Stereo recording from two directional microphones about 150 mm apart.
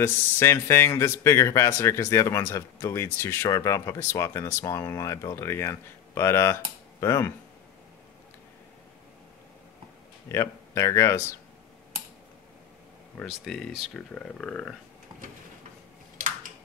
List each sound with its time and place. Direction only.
0.0 s speech: 15° left (ahead or behind)
10.2 s speech: 20° left (ahead or behind)
13.2 s speech: centre (ahead or behind)